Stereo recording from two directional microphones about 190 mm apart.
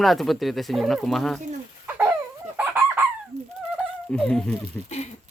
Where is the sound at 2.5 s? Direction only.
10° right (ahead or behind).